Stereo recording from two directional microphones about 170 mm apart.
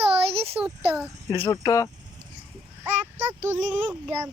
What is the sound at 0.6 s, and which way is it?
Speech, 5° right (ahead or behind).